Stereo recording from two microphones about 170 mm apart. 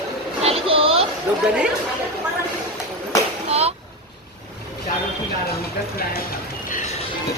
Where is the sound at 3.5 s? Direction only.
40° right (ahead or behind).